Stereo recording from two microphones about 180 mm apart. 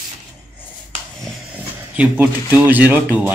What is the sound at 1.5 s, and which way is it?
Speech, 10° right (ahead or behind).